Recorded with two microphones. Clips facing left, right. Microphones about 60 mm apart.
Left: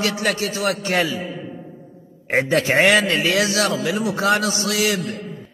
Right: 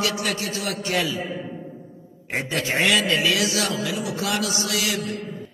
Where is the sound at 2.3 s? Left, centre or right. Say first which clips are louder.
Left 7 dB; left.